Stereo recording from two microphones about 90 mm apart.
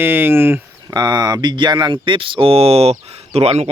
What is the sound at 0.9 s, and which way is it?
Speech, 55° right (ahead or behind).